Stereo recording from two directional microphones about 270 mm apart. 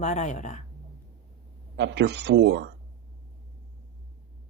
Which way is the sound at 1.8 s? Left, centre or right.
Right.